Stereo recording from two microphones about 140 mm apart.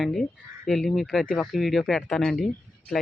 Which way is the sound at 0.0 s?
Centre (ahead or behind).